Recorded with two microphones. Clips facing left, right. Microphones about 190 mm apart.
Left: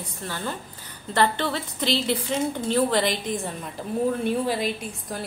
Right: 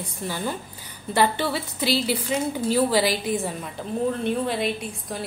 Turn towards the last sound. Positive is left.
turn(degrees=0)  # may be behind; listen again after turning